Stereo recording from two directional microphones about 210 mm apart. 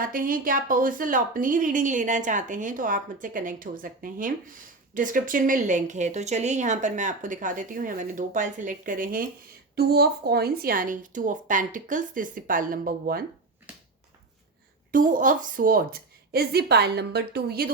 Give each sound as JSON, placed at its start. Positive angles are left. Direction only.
{"t": 0.0, "sound": "a woman's voice", "side_deg": -40}
{"t": 13.7, "sound": "finger snapping", "side_deg": -5}
{"t": 14.9, "sound": "speech", "side_deg": -40}